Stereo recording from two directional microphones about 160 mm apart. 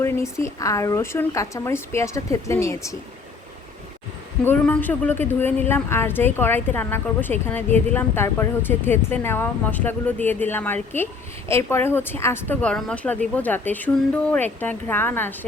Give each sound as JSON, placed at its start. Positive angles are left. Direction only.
{"t": 0.0, "sound": "speech", "side_deg": 15}
{"t": 4.4, "sound": "speech", "side_deg": 10}